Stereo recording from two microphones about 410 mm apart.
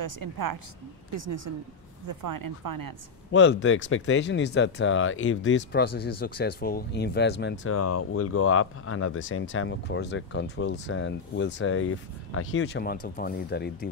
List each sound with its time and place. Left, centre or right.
0.0 s speech: right
1.1 s a woman's voice: right
2.0 s speech: right
3.3 s speech: left